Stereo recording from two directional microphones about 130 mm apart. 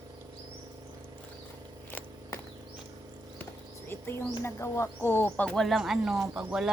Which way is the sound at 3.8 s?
15° left (ahead or behind).